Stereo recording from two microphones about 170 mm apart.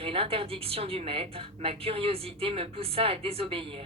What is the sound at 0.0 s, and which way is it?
Speech, 35° right (ahead or behind).